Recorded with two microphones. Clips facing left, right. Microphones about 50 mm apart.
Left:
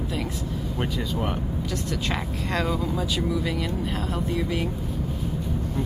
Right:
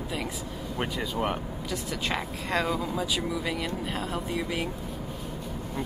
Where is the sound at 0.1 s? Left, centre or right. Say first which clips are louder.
Left 4 dB; centre.